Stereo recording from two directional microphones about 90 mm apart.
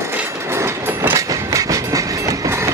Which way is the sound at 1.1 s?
40° right (ahead or behind).